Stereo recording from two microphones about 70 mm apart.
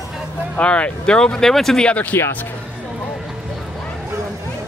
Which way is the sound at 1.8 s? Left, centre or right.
Left.